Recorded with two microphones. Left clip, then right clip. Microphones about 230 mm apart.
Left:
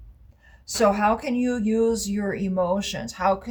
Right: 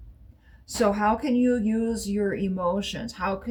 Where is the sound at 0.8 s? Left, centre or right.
Left.